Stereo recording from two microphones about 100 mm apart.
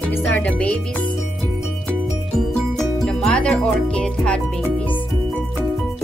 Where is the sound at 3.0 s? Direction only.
10° left (ahead or behind).